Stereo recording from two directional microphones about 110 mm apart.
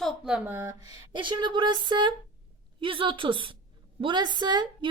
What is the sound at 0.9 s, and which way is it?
A woman's voice, 45° right (ahead or behind).